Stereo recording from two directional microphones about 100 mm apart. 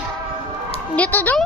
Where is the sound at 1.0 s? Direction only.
15° left (ahead or behind).